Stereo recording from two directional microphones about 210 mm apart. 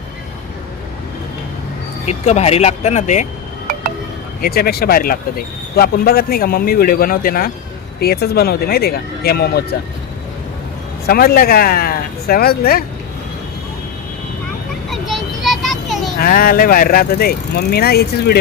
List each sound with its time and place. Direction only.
2.0 s speech: 30° left (ahead or behind)
4.4 s speech: 45° left (ahead or behind)
11.0 s speech: 45° left (ahead or behind)
14.8 s a sound: centre (ahead or behind)
16.1 s speech: 45° left (ahead or behind)